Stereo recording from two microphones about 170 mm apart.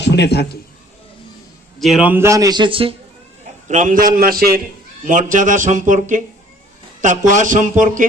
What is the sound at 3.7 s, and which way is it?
A man's voice, 50° right (ahead or behind).